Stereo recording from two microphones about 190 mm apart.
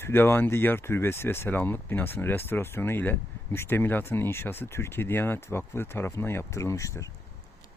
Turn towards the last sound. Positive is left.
turn(degrees=15)  # may be behind; listen again after turning